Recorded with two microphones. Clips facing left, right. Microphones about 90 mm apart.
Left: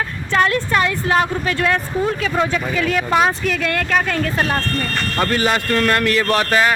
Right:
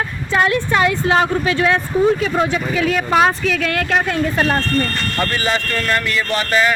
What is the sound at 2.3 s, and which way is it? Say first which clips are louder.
Speech: right 1 dB; 5° right (ahead or behind).